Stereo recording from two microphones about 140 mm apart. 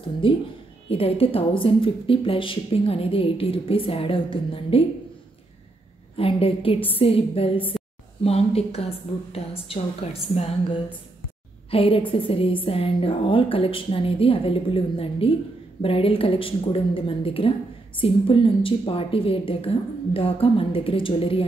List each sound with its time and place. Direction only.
0.2 s speech: 40° left (ahead or behind)
6.1 s a woman's voice: 40° left (ahead or behind)